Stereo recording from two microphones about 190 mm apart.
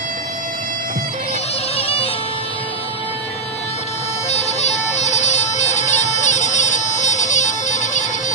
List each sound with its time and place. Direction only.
1.8 s bagpipes: 30° left (ahead or behind)
4.3 s bagpipes: 35° left (ahead or behind)